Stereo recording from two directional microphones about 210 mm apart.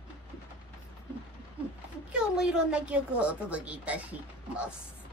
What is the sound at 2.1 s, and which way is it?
A woman's voice, 5° right (ahead or behind).